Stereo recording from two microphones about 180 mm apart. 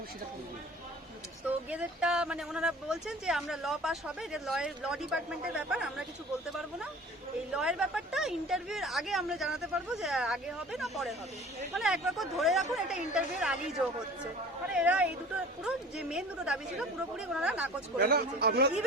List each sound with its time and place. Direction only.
1.5 s speech: 5° right (ahead or behind)
7.5 s speech: 5° right (ahead or behind)
18.0 s speech: 60° right (ahead or behind)